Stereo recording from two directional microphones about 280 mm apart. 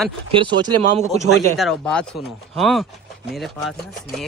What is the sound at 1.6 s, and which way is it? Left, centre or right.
Speech, centre.